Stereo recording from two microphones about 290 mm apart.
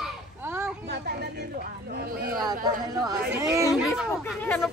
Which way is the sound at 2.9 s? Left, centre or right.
Centre.